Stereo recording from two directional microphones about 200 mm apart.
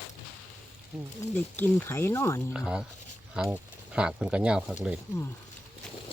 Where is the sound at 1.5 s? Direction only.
10° left (ahead or behind).